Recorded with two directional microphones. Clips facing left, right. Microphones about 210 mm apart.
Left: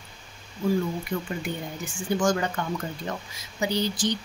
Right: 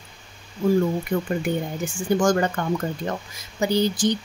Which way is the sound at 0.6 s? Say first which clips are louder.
Right 5 dB; 50° right (ahead or behind).